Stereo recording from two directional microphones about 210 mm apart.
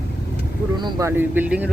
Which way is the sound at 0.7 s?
20° right (ahead or behind).